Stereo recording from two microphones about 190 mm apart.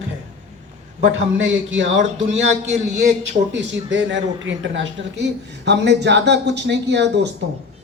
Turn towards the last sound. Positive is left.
turn(degrees=-65)  # may be behind; listen again after turning